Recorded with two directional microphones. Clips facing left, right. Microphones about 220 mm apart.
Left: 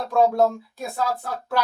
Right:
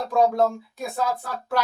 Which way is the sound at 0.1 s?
Centre (ahead or behind).